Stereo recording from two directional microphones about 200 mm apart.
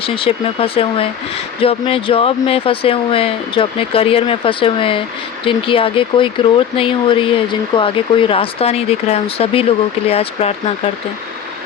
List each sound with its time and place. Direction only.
0.0 s speech: 25° left (ahead or behind)